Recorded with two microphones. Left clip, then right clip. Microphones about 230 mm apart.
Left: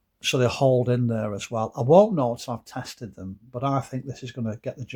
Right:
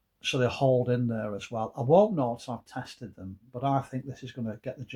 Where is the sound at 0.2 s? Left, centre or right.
Left.